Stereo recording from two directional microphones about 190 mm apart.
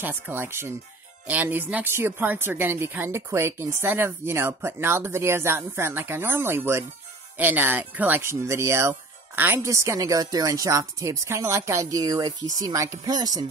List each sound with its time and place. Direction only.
0.0 s speech: 10° right (ahead or behind)